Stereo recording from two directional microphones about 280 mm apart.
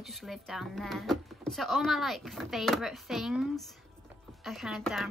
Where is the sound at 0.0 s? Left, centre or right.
Centre.